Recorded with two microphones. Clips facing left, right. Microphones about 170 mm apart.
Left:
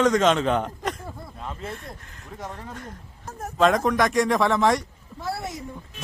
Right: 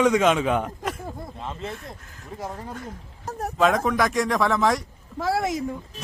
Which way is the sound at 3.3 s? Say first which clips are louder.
Right 5 dB; 35° right (ahead or behind).